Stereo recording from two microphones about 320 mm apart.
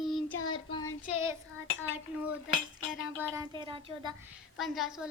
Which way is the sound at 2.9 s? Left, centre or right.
Centre.